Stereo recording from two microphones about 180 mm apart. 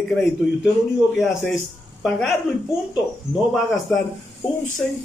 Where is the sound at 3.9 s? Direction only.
5° left (ahead or behind).